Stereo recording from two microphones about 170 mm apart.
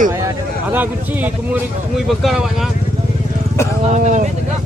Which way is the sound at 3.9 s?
45° right (ahead or behind).